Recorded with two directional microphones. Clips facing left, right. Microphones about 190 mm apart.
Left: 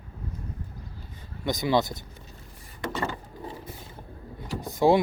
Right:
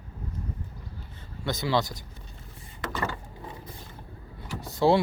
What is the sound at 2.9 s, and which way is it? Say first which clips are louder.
Mechanisms: left 1 dB; 20° left (ahead or behind).